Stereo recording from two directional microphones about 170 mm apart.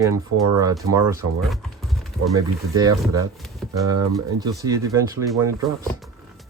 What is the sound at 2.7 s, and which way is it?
Speech, 20° right (ahead or behind).